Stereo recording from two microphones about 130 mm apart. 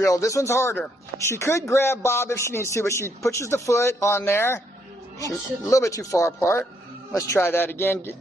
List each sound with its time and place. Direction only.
0.0 s speech: 25° left (ahead or behind)